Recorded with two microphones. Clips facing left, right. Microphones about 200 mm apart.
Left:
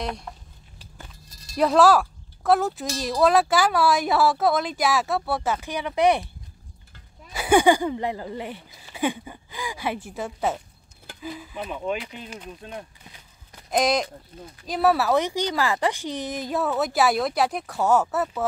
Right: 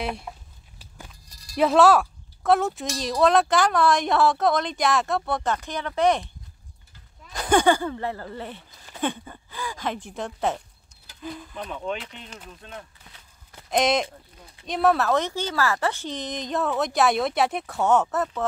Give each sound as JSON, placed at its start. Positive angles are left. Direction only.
{"t": 0.0, "sound": "speech", "side_deg": -5}
{"t": 0.7, "sound": "walk", "side_deg": -10}
{"t": 1.6, "sound": "speech", "side_deg": 0}
{"t": 7.3, "sound": "speech", "side_deg": 10}
{"t": 12.4, "sound": "a sound", "side_deg": 15}
{"t": 13.7, "sound": "speech", "side_deg": 0}